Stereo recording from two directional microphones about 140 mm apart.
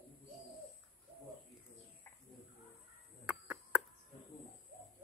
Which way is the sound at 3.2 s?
10° right (ahead or behind).